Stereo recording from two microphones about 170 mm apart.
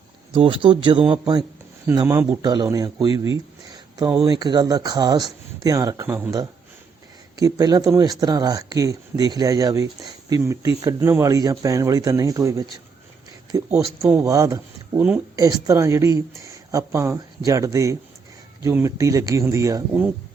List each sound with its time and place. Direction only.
0.3 s speech: 30° right (ahead or behind)
2.0 s speech: 15° right (ahead or behind)
4.2 s speech: 25° right (ahead or behind)
6.1 s a woman's voice: 10° right (ahead or behind)
7.3 s a woman's voice: 20° right (ahead or behind)